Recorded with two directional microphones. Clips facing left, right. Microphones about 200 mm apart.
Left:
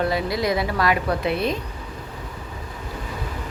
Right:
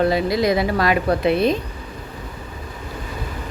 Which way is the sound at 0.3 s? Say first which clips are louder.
Right 5 dB; 90° right.